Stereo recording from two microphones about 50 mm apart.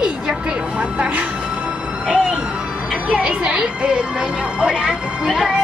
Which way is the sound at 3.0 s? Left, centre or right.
Centre.